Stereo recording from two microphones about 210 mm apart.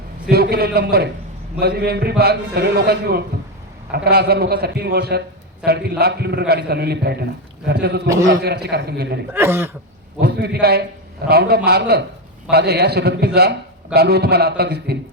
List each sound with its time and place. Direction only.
0.3 s a man's voice: 50° right (ahead or behind)
9.3 s speech: 10° right (ahead or behind)
10.2 s a man's voice: 50° right (ahead or behind)